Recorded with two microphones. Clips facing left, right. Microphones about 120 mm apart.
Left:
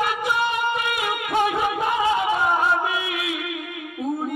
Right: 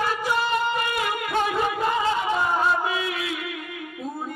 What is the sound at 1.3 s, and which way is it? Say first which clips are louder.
Music: left 3 dB; 15° left (ahead or behind).